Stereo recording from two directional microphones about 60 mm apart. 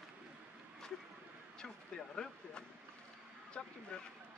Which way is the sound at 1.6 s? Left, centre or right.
Centre.